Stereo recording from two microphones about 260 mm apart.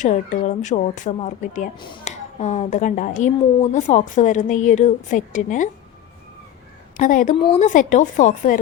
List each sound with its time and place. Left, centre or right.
0.0 s speech: left
6.9 s a woman's voice: left